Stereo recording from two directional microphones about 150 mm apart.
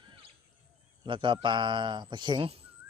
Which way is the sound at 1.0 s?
35° right (ahead or behind).